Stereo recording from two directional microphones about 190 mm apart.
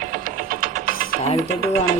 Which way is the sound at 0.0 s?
45° right (ahead or behind).